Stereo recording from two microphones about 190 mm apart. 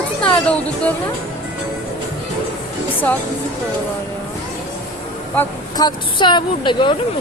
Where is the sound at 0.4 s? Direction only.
5° left (ahead or behind).